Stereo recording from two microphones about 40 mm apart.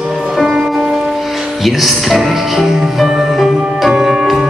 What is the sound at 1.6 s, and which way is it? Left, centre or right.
Music, centre.